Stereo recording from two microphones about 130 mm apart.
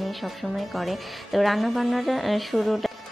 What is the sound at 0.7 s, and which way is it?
Speech, centre (ahead or behind).